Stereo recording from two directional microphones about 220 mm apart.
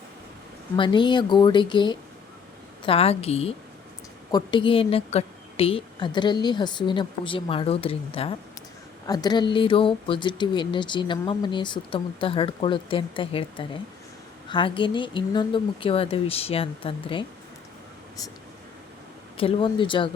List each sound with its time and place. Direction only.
0.8 s speech: 20° left (ahead or behind)
19.4 s speech: 25° left (ahead or behind)